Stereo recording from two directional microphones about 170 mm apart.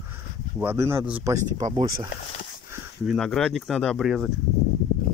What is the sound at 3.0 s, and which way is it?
Speech, centre (ahead or behind).